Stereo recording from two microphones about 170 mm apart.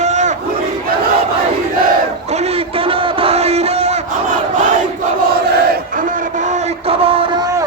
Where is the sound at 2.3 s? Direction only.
40° right (ahead or behind).